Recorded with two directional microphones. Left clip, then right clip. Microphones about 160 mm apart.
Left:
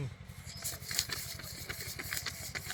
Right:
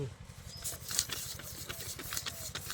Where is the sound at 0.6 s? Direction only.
10° left (ahead or behind).